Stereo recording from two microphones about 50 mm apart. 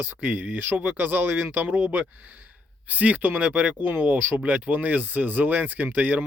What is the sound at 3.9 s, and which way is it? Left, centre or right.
Speech, right.